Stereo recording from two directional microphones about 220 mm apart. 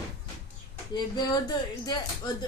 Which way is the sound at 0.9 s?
20° left (ahead or behind).